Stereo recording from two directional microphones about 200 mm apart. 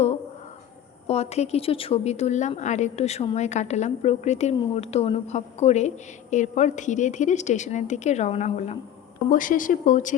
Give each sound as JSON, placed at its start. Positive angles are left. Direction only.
{"t": 1.0, "sound": "a woman's voice", "side_deg": 30}